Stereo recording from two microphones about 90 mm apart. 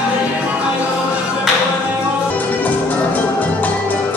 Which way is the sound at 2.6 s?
20° left (ahead or behind).